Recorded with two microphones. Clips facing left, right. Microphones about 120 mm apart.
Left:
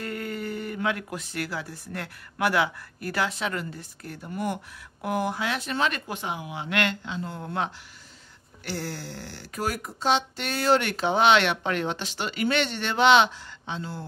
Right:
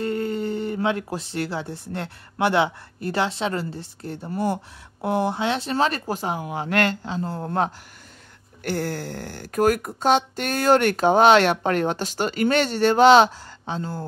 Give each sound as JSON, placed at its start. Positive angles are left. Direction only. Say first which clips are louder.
{"t": 0.0, "sound": "speech", "louder": "right 7 dB", "side_deg": -30}
{"t": 8.6, "sound": "speech", "louder": "right 7 dB", "side_deg": -55}